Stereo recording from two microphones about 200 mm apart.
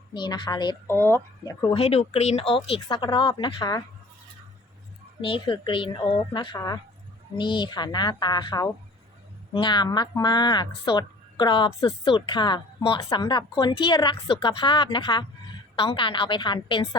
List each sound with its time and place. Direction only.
0.1 s speech: 20° left (ahead or behind)
0.9 s speech: 10° left (ahead or behind)
1.6 s speech: 30° left (ahead or behind)
5.2 s speech: 25° left (ahead or behind)